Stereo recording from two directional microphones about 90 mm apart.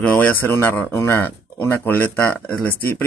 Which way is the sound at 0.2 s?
20° left (ahead or behind).